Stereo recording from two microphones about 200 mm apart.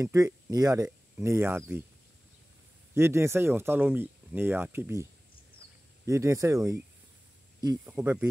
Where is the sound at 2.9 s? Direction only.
15° right (ahead or behind).